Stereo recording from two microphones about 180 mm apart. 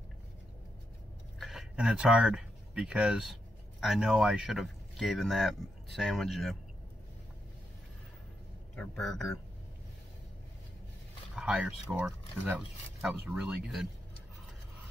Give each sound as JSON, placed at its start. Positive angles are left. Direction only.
{"t": 1.4, "sound": "speech", "side_deg": 0}
{"t": 8.7, "sound": "speech", "side_deg": 0}
{"t": 11.3, "sound": "speech", "side_deg": -5}